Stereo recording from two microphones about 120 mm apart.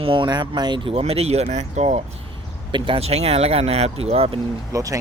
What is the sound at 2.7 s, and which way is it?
Speech, 45° right (ahead or behind).